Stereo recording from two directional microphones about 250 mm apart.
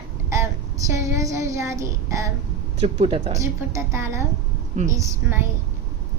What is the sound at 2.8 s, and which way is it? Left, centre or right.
Speech, right.